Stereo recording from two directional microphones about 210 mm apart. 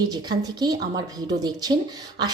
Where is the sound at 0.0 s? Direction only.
20° right (ahead or behind).